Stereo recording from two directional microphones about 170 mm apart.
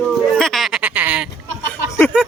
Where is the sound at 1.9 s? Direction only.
15° left (ahead or behind).